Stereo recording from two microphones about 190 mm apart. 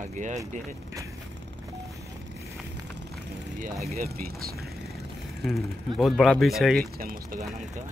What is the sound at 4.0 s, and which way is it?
Speech, 50° right (ahead or behind).